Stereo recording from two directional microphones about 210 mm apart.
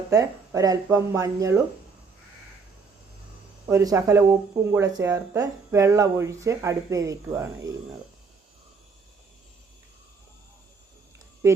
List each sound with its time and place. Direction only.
0.1 s speech: 15° right (ahead or behind)
3.7 s speech: 15° right (ahead or behind)
11.4 s speech: 15° right (ahead or behind)